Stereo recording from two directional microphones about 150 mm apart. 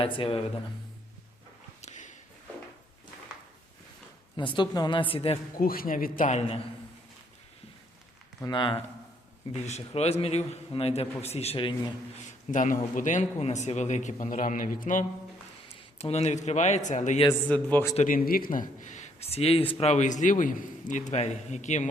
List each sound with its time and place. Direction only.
0.0 s speech: 35° left (ahead or behind)
1.8 s a sound: 55° left (ahead or behind)
4.4 s speech: 30° left (ahead or behind)
5.5 s a man's voice: 75° left (ahead or behind); by 6.4 s 60° left (ahead or behind)
8.4 s speech: 30° left (ahead or behind)
9.6 s a man's voice: 45° left (ahead or behind)
12.5 s speech: 60° left (ahead or behind)
15.7 s a man's voice: 40° left (ahead or behind)
17.5 s a man's voice: 10° left (ahead or behind)
17.9 s a man's voice: 60° left (ahead or behind)
18.9 s a man's voice: 50° left (ahead or behind)
21.1 s a man's voice: 50° left (ahead or behind)